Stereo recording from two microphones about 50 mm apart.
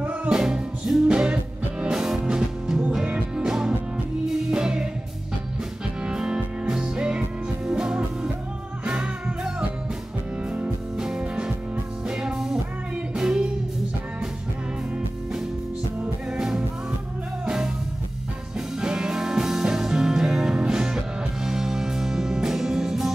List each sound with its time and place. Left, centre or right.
0.3 s music: centre
2.0 s music: centre
6.0 s music: centre
11.0 s music: centre
16.3 s music: centre
18.8 s music: centre